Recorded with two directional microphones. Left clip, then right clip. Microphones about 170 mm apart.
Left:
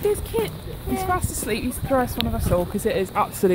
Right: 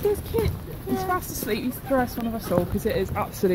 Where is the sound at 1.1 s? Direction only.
15° left (ahead or behind).